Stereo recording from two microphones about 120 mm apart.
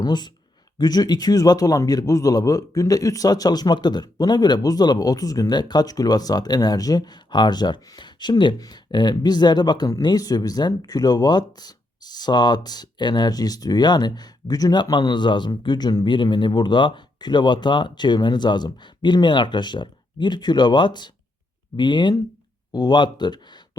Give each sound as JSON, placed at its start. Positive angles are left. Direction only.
{"t": 0.0, "sound": "a man's voice", "side_deg": 35}